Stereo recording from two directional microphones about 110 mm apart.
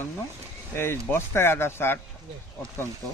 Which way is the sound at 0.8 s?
20° left (ahead or behind).